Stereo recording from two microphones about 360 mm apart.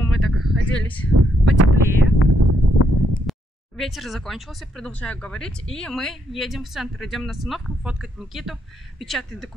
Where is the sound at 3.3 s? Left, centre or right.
Centre.